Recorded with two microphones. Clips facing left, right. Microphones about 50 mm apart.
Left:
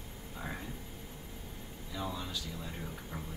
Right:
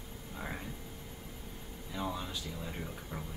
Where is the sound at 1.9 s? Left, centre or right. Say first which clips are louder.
Right 1 dB; right.